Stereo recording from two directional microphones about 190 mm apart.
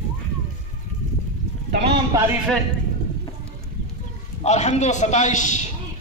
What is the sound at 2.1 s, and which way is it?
Speech, 15° right (ahead or behind).